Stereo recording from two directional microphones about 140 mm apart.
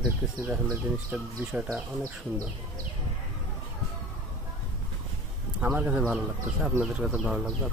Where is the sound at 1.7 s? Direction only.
25° right (ahead or behind).